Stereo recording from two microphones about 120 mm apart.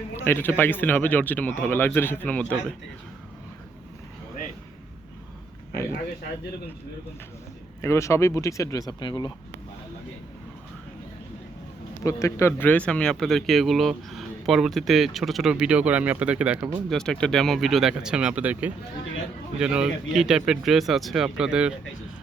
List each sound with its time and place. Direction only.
0.2 s speech: 15° left (ahead or behind)
7.8 s speech: 25° left (ahead or behind)
12.0 s speech: 25° left (ahead or behind); by 16.8 s 10° right (ahead or behind)
16.9 s speech: 5° left (ahead or behind)